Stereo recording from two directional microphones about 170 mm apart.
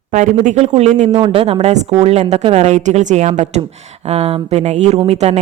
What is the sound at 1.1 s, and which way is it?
A man's voice, 30° right (ahead or behind).